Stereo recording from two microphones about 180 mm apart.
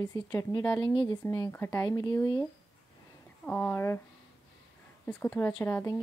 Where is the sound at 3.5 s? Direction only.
10° left (ahead or behind).